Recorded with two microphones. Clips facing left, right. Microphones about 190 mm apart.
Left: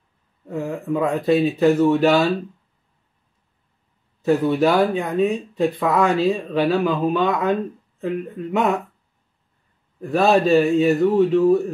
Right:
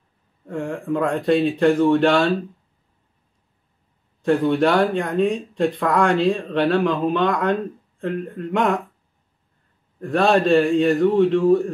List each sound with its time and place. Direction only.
0.5 s speech: 5° left (ahead or behind)
4.2 s speech: 5° left (ahead or behind)
9.9 s speech: 5° left (ahead or behind)